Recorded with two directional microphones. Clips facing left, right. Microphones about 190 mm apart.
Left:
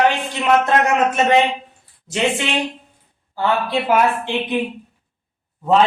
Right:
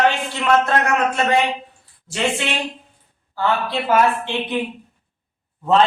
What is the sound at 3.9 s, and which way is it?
Speech, 15° left (ahead or behind).